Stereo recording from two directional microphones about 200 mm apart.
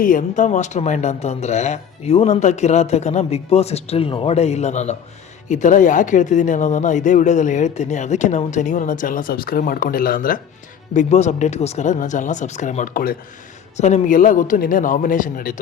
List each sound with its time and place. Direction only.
0.0 s speech: 40° left (ahead or behind)